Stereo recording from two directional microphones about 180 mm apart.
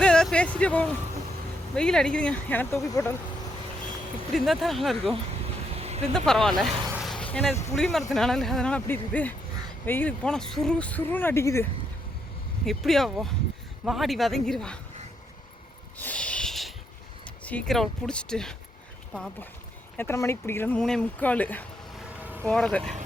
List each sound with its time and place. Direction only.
0.0 s a sound: 5° left (ahead or behind)
1.7 s speech: 5° left (ahead or behind)
4.3 s speech: centre (ahead or behind)
5.7 s a sound: 35° right (ahead or behind)
6.1 s speech: 5° left (ahead or behind)
6.9 s a sound: centre (ahead or behind)
7.8 s speech: centre (ahead or behind)
12.6 s speech: centre (ahead or behind)
16.0 s a sound: 10° left (ahead or behind)
17.2 s speech: 5° left (ahead or behind)
20.0 s speech: 15° left (ahead or behind)
22.2 s vehicle: 10° right (ahead or behind)
22.4 s speech: 5° left (ahead or behind)